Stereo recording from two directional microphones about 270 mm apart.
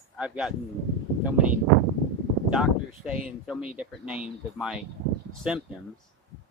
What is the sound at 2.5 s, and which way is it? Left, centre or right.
Speech, centre.